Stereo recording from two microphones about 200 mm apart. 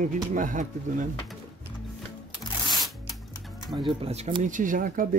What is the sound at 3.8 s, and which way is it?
Speech, 30° right (ahead or behind).